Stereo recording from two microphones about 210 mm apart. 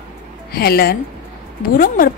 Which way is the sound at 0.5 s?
45° left (ahead or behind).